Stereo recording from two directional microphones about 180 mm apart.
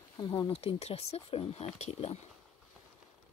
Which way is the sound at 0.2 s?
30° left (ahead or behind).